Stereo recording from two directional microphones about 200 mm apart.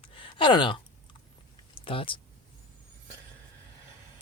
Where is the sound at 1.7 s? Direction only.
25° left (ahead or behind).